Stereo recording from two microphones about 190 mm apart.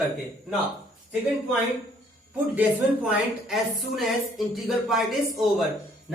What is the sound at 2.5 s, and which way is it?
A woman's voice, 5° right (ahead or behind).